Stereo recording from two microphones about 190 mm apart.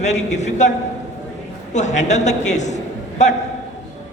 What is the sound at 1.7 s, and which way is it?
A man's voice, 40° left (ahead or behind).